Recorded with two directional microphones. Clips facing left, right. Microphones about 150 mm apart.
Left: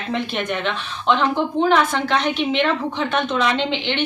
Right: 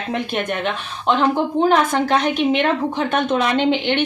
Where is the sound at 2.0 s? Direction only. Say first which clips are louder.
Right 3 dB; 45° right (ahead or behind).